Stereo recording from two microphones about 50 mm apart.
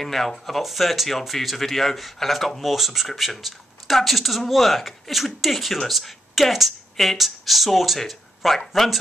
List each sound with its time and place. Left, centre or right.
0.0 s speech: centre